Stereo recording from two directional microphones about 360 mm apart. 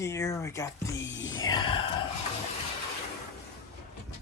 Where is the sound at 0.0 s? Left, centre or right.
Centre.